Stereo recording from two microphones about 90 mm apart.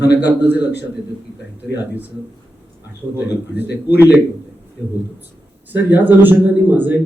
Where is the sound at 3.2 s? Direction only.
20° right (ahead or behind).